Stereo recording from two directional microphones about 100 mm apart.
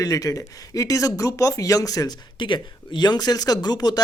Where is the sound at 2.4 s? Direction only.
50° left (ahead or behind).